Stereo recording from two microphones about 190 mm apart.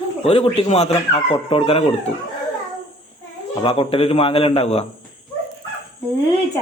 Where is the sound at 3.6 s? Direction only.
30° left (ahead or behind).